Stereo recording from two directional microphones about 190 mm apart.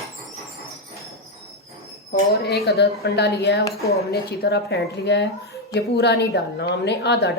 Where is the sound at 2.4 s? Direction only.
60° left (ahead or behind).